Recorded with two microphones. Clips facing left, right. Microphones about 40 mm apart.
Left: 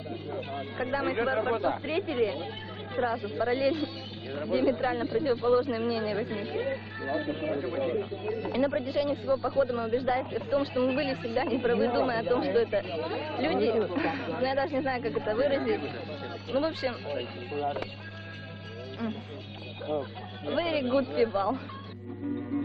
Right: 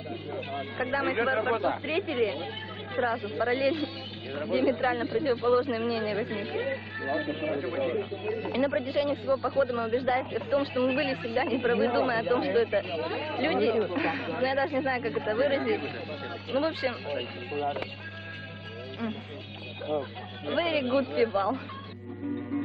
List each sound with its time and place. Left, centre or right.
0.3 s speech: right
19.9 s speech: right